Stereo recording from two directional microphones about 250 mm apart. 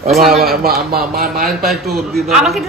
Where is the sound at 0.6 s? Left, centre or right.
Right.